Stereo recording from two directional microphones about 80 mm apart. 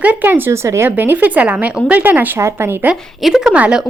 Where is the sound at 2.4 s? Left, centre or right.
Right.